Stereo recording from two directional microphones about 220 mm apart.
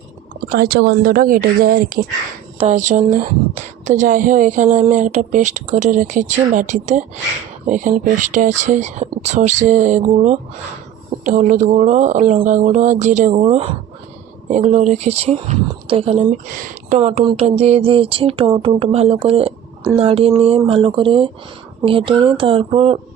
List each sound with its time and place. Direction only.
0.4 s a woman's voice: 45° right (ahead or behind); by 23.0 s 25° right (ahead or behind)